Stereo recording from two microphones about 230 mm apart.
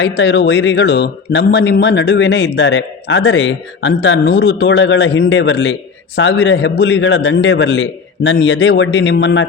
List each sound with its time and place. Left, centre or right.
0.0 s speech: left